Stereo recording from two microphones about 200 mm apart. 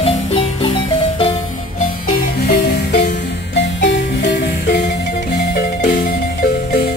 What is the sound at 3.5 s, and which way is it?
Music, 60° left (ahead or behind).